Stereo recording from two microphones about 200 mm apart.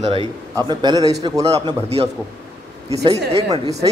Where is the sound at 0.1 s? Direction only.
25° right (ahead or behind).